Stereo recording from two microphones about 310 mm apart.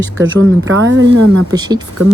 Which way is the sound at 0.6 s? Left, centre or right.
Right.